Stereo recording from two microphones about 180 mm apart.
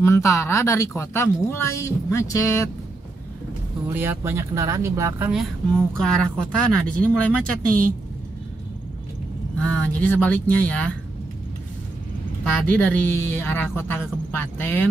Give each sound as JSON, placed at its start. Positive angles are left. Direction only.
{"t": 0.0, "sound": "speech", "side_deg": 15}
{"t": 3.9, "sound": "speech", "side_deg": -10}
{"t": 5.3, "sound": "a woman's voice", "side_deg": 0}
{"t": 9.6, "sound": "speech", "side_deg": 10}
{"t": 12.7, "sound": "speech", "side_deg": 10}